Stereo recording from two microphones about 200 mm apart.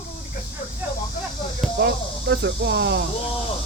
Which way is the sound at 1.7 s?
55° right (ahead or behind).